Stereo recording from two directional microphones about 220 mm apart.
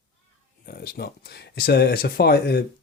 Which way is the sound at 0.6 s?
45° left (ahead or behind).